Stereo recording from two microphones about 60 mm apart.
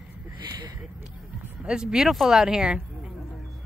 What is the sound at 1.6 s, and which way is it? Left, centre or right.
Speech, centre.